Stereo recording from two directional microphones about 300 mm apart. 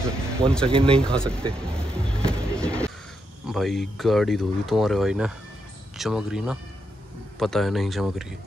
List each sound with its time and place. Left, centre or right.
0.0 s speech: centre
0.9 s music: centre
3.4 s speech: centre